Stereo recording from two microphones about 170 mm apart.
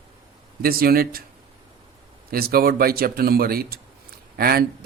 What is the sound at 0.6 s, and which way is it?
Speech, 60° right (ahead or behind).